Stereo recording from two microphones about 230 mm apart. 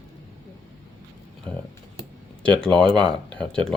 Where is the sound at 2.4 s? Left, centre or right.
Centre.